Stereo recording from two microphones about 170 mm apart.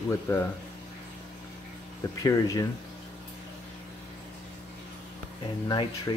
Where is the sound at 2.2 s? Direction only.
20° left (ahead or behind).